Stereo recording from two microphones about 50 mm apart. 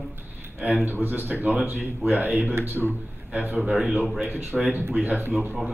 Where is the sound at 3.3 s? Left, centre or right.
Right.